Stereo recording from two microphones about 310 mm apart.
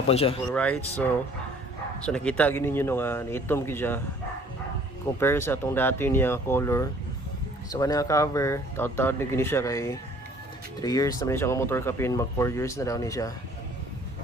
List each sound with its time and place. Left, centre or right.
0.1 s speech: centre
0.5 s speech: centre
5.2 s speech: centre